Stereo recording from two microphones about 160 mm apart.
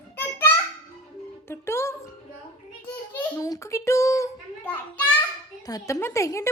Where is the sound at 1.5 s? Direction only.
15° left (ahead or behind).